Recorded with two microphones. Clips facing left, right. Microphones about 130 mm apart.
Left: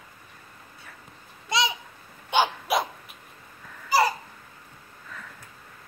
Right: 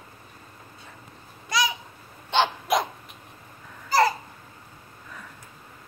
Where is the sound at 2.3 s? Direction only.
5° left (ahead or behind).